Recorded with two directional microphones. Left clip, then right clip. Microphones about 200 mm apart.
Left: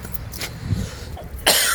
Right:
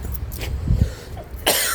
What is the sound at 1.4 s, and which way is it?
Cough, 10° right (ahead or behind).